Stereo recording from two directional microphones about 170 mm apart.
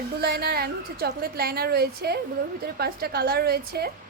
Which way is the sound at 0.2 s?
65° right (ahead or behind).